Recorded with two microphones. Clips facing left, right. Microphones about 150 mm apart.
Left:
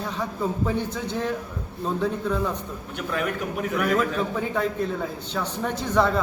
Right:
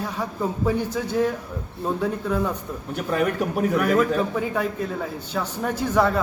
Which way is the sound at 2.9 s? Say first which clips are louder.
Right 5 dB; 40° right (ahead or behind).